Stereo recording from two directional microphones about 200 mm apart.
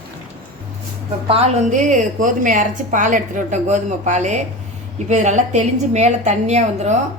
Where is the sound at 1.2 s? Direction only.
30° right (ahead or behind).